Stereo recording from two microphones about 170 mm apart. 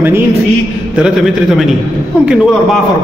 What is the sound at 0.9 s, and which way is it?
A man's voice, 5° right (ahead or behind).